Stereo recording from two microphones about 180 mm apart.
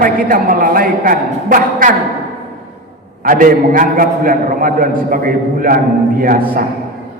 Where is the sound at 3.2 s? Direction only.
50° right (ahead or behind).